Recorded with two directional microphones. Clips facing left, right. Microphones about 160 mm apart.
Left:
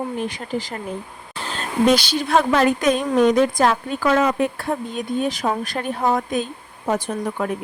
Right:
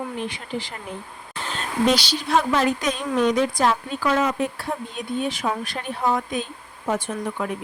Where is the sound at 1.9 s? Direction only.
50° left (ahead or behind).